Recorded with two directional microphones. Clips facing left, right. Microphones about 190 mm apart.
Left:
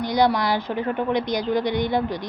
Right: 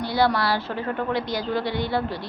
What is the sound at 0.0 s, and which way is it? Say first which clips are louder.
A woman's voice: left 2 dB; 15° left (ahead or behind).